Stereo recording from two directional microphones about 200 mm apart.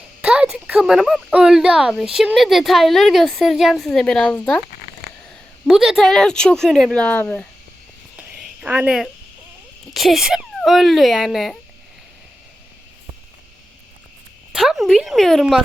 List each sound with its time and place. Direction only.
0.2 s speech: 5° right (ahead or behind)
5.6 s speech: centre (ahead or behind)
8.1 s a sound: 5° right (ahead or behind)
9.9 s speech: centre (ahead or behind)
14.5 s speech: centre (ahead or behind)